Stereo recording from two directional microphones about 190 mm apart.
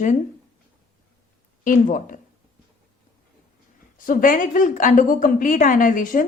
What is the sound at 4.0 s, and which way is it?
A woman's voice, 45° left (ahead or behind).